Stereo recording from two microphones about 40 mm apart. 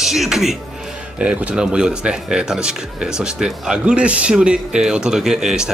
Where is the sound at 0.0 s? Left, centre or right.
Centre.